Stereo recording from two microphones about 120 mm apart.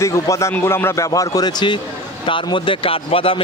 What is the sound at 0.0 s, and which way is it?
Speech, 25° left (ahead or behind).